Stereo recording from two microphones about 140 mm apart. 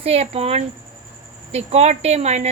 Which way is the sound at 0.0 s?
45° right (ahead or behind).